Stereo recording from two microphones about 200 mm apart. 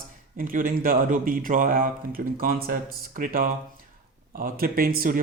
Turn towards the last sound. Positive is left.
turn(degrees=-45)  # may be behind; listen again after turning